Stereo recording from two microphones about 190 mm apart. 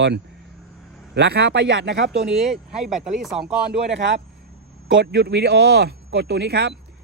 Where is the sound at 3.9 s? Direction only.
65° right (ahead or behind).